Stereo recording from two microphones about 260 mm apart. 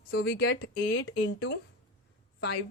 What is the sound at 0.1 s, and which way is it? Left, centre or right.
Speech, left.